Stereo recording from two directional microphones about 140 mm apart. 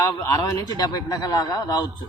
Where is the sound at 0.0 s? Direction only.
20° left (ahead or behind).